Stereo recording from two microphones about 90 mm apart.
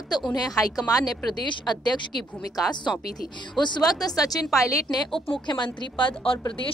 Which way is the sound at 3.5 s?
55° left (ahead or behind).